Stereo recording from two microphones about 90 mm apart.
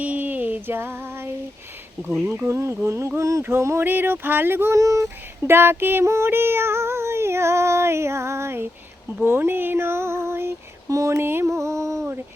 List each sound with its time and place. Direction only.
0.0 s female singing: 15° right (ahead or behind)
2.2 s a sound: 25° right (ahead or behind)
3.4 s speech: 30° right (ahead or behind)
9.2 s female singing: 25° right (ahead or behind)